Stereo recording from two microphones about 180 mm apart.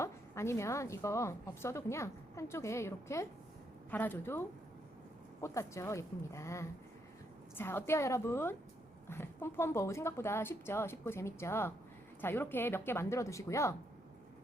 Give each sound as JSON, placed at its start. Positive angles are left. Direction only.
{"t": 0.0, "sound": "a woman's voice", "side_deg": 15}